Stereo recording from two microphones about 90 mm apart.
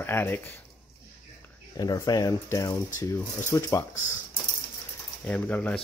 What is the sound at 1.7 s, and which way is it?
Speech, 40° left (ahead or behind).